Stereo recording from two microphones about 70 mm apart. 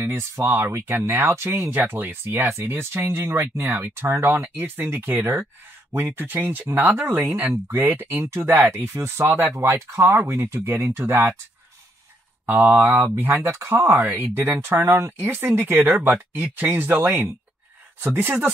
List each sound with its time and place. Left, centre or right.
0.0 s speech: right
12.4 s speech: right
13.3 s speech: right